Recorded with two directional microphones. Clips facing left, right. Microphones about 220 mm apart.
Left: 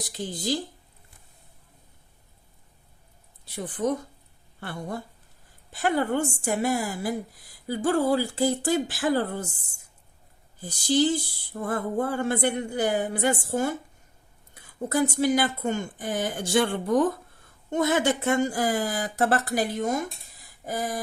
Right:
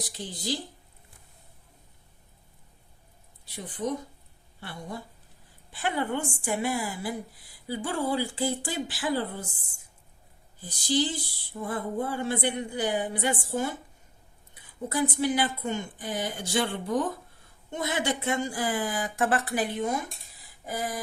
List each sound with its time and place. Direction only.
0.2 s speech: 50° left (ahead or behind)
3.5 s a woman's voice: 50° left (ahead or behind)
10.6 s speech: 45° left (ahead or behind)
14.5 s a sound: 45° left (ahead or behind)
15.1 s speech: 40° left (ahead or behind)